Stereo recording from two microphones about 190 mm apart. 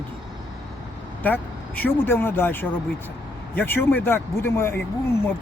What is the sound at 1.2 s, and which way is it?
Speech, 10° left (ahead or behind).